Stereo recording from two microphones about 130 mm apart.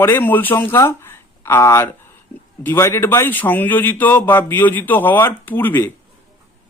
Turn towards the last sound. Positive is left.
turn(degrees=15)  # may be behind; listen again after turning